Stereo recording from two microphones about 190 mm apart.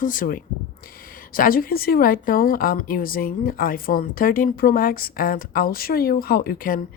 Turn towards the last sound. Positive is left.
turn(degrees=45)  # may be behind; listen again after turning